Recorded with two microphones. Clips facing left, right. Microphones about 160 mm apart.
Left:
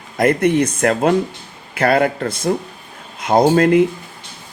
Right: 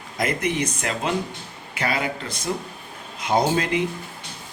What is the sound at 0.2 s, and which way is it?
Speech, 60° left (ahead or behind).